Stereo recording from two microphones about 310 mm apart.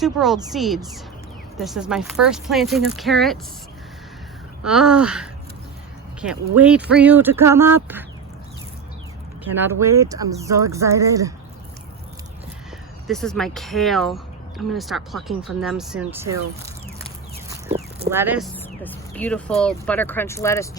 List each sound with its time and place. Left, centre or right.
0.0 s speech: centre
4.6 s speech: centre
9.6 s speech: centre
13.1 s speech: centre
18.1 s speech: centre
18.5 s speech: centre